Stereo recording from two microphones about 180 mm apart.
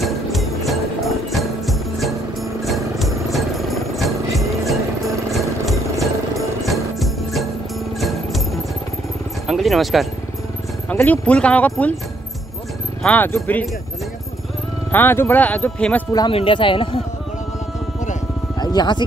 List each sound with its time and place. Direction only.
0.0 s music: centre (ahead or behind)
9.5 s speech: centre (ahead or behind)
13.0 s speech: 10° left (ahead or behind)
14.9 s speech: 10° left (ahead or behind)
16.1 s speech: 20° left (ahead or behind)
18.6 s music: 25° left (ahead or behind)